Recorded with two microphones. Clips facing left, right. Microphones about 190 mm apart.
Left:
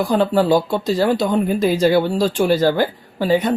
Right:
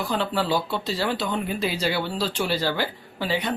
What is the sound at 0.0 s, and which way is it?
Speech, 45° left (ahead or behind).